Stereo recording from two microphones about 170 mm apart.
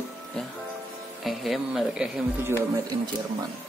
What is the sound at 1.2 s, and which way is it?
Speech, centre (ahead or behind).